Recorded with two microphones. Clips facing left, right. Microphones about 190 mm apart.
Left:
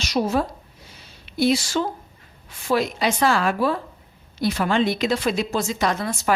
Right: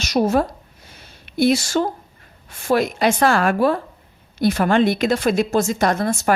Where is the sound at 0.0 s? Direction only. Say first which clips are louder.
Right 4 dB; 45° right (ahead or behind).